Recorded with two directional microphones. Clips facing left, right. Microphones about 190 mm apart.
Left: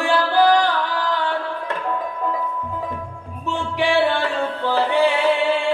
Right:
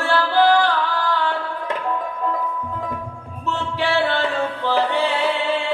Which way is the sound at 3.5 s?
15° left (ahead or behind).